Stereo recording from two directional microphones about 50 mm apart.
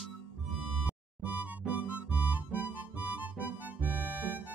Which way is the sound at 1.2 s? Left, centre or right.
Right.